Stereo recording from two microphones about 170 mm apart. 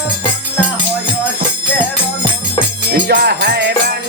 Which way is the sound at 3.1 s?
75° right (ahead or behind).